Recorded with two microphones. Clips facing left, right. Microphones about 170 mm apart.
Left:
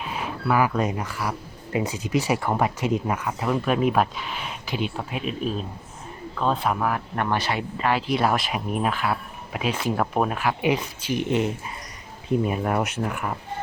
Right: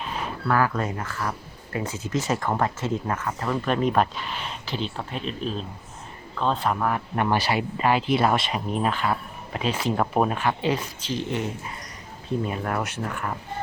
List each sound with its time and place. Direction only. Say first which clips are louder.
0.4 s speech: left 2 dB; 10° left (ahead or behind)